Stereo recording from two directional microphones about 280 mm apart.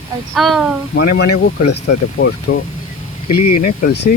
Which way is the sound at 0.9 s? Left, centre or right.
Left.